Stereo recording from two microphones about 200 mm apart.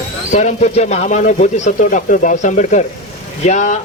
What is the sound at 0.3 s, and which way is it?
Speech, 35° left (ahead or behind).